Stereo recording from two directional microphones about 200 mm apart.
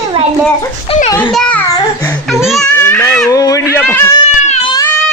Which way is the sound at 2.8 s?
10° left (ahead or behind).